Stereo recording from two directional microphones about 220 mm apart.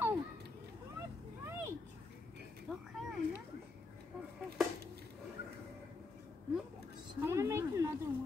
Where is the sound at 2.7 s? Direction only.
5° left (ahead or behind).